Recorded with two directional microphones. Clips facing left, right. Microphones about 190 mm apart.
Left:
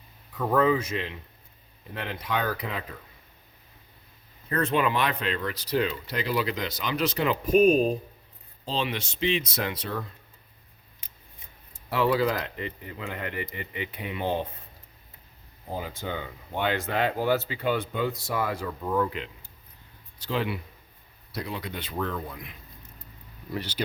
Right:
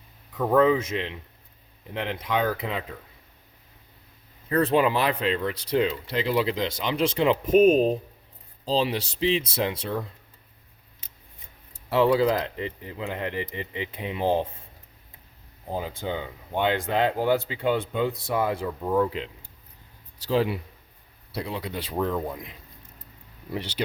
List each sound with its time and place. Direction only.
0.3 s speech: 25° right (ahead or behind)
4.6 s speech: 30° right (ahead or behind)
8.6 s speech: 35° right (ahead or behind)
11.9 s speech: 25° right (ahead or behind)
16.0 s speech: 20° right (ahead or behind)